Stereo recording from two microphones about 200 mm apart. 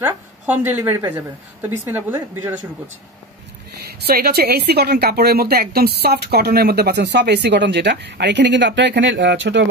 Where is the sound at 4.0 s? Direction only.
50° right (ahead or behind).